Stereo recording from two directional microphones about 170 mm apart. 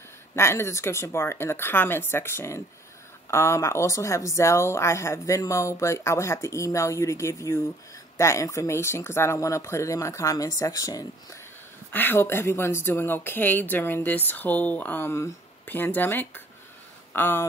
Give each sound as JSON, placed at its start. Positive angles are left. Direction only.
{"t": 0.4, "sound": "speech", "side_deg": 15}